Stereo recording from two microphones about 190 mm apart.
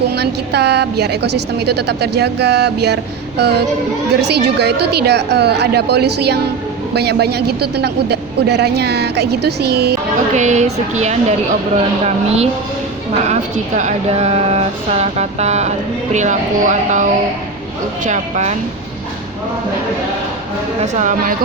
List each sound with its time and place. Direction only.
0.1 s a woman's voice: 60° right (ahead or behind)
10.3 s speech: 40° right (ahead or behind)
20.8 s speech: 40° right (ahead or behind)